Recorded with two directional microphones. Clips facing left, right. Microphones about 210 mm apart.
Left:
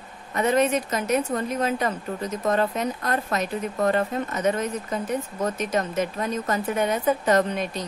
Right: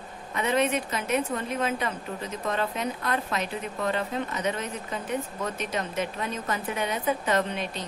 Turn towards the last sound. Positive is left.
turn(degrees=45)  # may be behind; listen again after turning